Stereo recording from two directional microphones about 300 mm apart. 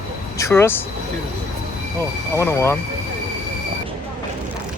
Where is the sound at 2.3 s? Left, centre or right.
Centre.